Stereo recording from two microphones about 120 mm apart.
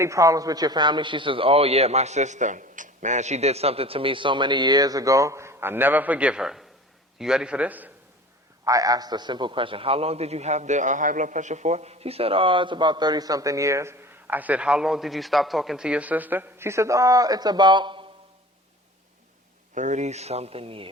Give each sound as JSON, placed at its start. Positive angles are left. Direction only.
{"t": 0.0, "sound": "a man's voice", "side_deg": -25}
{"t": 8.6, "sound": "a man's voice", "side_deg": -30}
{"t": 19.7, "sound": "speech", "side_deg": -85}